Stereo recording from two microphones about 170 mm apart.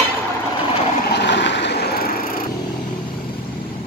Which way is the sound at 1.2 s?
90° left.